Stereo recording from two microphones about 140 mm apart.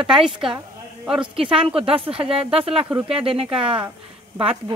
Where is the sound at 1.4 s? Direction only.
40° right (ahead or behind).